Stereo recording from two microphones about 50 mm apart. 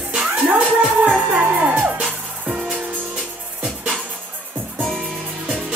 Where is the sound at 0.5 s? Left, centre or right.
Right.